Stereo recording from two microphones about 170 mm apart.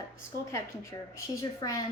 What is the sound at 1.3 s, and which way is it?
Speech, 20° left (ahead or behind).